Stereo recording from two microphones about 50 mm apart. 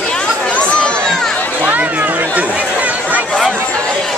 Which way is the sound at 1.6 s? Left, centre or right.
Right.